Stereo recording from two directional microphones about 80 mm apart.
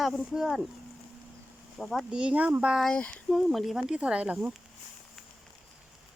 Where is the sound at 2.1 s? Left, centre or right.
Centre.